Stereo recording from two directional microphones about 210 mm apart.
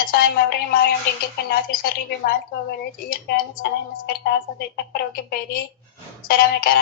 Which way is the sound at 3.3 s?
50° left (ahead or behind).